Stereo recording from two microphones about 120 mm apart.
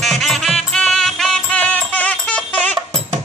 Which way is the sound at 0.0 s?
Centre (ahead or behind).